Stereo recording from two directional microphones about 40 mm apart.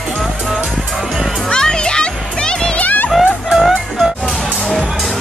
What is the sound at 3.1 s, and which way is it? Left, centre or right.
Music, centre.